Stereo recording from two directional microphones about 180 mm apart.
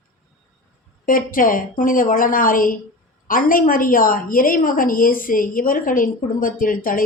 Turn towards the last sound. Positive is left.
turn(degrees=50)  # may be behind; listen again after turning